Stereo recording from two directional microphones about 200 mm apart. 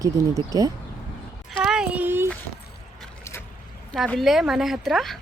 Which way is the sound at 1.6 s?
5° right (ahead or behind).